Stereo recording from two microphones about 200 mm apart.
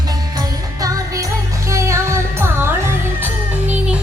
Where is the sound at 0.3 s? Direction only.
15° right (ahead or behind).